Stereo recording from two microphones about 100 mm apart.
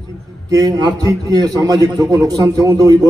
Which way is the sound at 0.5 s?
35° right (ahead or behind).